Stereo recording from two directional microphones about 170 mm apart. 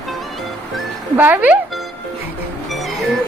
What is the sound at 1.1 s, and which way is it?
Speech, 10° right (ahead or behind).